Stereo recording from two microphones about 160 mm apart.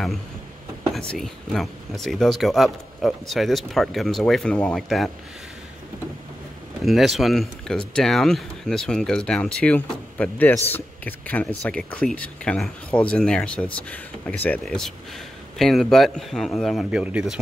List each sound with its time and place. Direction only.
0.9 s speech: centre (ahead or behind)
6.8 s speech: centre (ahead or behind)